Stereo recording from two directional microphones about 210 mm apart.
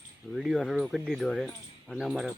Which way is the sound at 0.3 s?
Centre (ahead or behind).